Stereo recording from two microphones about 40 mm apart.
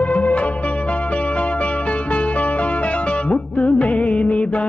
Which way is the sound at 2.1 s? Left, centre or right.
Left.